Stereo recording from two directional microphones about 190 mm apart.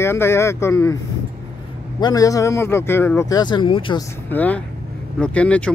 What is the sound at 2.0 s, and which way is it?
Speech, 20° left (ahead or behind).